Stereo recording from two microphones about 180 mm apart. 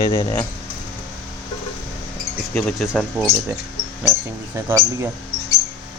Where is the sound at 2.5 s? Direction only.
Centre (ahead or behind).